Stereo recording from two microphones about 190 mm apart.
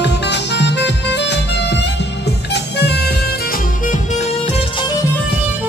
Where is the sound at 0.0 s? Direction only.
65° left (ahead or behind); by 4.0 s 45° left (ahead or behind).